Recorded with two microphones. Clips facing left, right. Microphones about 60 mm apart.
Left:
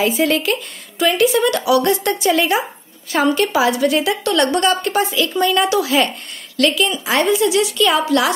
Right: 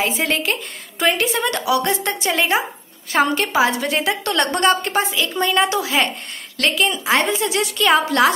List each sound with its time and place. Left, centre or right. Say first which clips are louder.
0.0 s a woman's voice: left 4 dB; right